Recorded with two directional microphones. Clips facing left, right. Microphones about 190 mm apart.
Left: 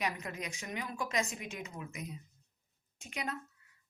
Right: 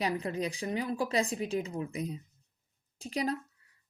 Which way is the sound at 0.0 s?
35° right (ahead or behind).